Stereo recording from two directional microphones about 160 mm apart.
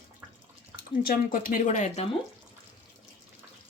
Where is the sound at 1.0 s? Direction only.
60° left (ahead or behind).